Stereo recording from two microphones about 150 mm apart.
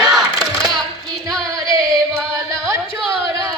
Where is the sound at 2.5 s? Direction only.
20° right (ahead or behind).